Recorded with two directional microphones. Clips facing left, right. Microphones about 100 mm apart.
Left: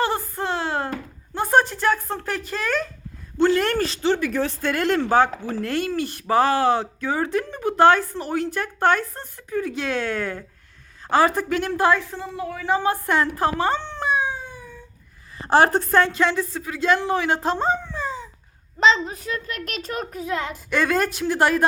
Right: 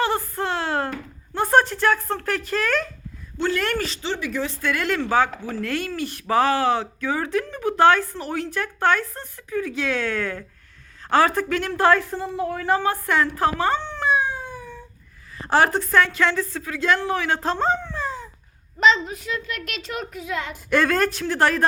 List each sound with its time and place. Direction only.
0.0 s a sound: 30° left (ahead or behind)
1.3 s a sound: 5° left (ahead or behind)
1.9 s speech: 5° left (ahead or behind)
2.2 s a woman's voice: 30° left (ahead or behind)
5.5 s a woman's voice: 20° left (ahead or behind)
11.0 s a sound: 5° left (ahead or behind)
11.3 s speech: 15° left (ahead or behind)
11.9 s a woman's voice: 5° right (ahead or behind)
12.8 s a woman's voice: 20° left (ahead or behind)
15.4 s a woman's voice: 25° left (ahead or behind); by 18.3 s centre (ahead or behind)
18.8 s speech: 30° left (ahead or behind)
20.7 s speech: centre (ahead or behind)